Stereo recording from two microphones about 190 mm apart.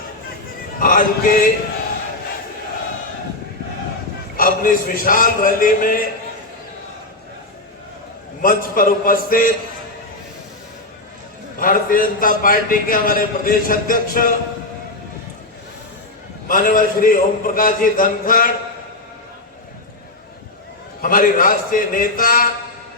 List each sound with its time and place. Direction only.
0.8 s a man's voice: 50° left (ahead or behind)
4.4 s a man's voice: 50° left (ahead or behind)
8.4 s a man's voice: 45° left (ahead or behind)
11.6 s a man's voice: 45° left (ahead or behind)
16.5 s a man's voice: 45° left (ahead or behind)
21.0 s a man's voice: 45° left (ahead or behind)